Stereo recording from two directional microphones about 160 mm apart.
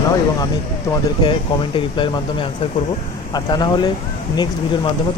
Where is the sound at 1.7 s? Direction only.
30° left (ahead or behind).